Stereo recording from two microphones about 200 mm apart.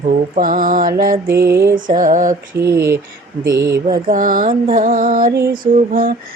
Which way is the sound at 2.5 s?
15° right (ahead or behind).